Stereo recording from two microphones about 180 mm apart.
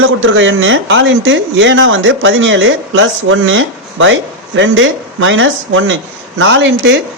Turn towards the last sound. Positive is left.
turn(degrees=-80)